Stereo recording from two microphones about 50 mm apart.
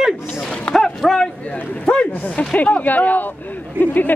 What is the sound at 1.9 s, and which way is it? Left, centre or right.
Speech, left.